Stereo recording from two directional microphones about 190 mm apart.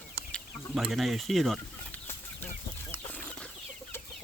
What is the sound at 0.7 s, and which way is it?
Speech, centre (ahead or behind).